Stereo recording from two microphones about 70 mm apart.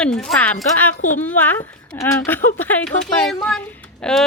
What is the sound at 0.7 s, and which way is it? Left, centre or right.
A woman's voice, left.